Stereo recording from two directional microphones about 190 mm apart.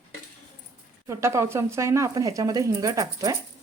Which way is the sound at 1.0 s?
15° right (ahead or behind).